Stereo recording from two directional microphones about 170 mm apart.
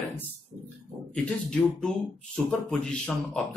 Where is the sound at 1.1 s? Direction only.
5° left (ahead or behind).